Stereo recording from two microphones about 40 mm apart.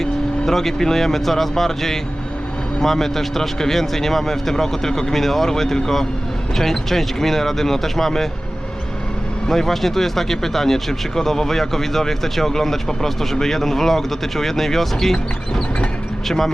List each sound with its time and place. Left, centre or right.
0.0 s speech: centre
9.5 s speech: centre